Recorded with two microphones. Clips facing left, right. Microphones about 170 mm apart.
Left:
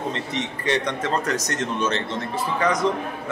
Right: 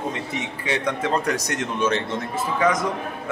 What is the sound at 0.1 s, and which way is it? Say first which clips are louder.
Speech: left 1 dB; 10° right (ahead or behind).